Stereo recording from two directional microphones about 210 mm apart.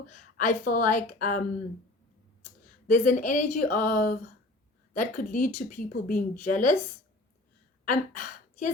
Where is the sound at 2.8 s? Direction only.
35° left (ahead or behind).